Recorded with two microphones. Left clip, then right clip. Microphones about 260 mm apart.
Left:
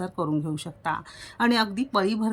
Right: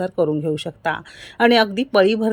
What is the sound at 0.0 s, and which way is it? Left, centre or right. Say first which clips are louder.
Speech: right 9 dB; centre.